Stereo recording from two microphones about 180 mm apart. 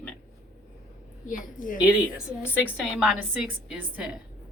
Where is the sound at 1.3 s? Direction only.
50° left (ahead or behind).